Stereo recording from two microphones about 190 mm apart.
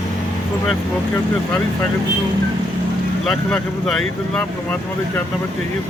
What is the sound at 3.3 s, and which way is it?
Speech, centre (ahead or behind).